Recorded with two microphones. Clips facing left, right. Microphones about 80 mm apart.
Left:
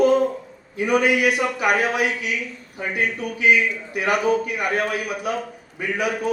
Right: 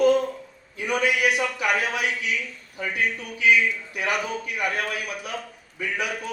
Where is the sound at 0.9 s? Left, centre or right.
Left.